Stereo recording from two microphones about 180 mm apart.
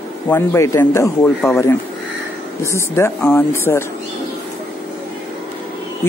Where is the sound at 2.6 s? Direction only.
15° left (ahead or behind).